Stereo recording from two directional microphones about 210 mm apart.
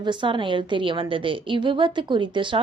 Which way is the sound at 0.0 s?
20° right (ahead or behind).